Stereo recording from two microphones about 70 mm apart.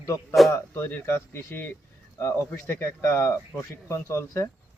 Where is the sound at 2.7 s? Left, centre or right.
Left.